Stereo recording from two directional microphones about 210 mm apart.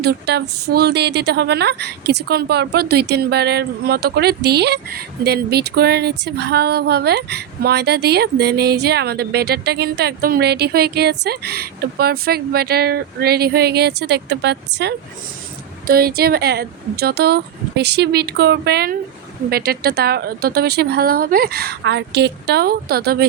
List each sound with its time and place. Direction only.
0.0 s a woman's voice: 50° right (ahead or behind)